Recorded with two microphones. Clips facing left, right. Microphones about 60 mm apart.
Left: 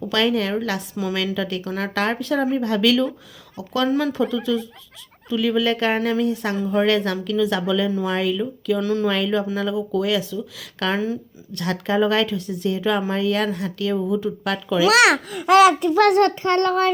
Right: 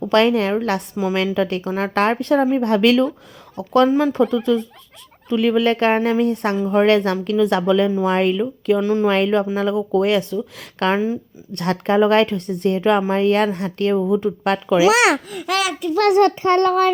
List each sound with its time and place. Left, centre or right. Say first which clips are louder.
0.0 s a woman's voice: right 5 dB; right
3.8 s child singing: right 4 dB; right
4.1 s a woman's voice: right 4 dB; right
8.8 s child singing: right 3 dB; right
9.0 s a woman's voice: right 4 dB; right
9.7 s a woman's voice: right 5 dB; right
14.8 s child singing: left 1 dB; right
15.4 s a child's voice: left 9 dB; left
16.0 s child singing: right 3 dB; centre
16.4 s child singing: right 3 dB; right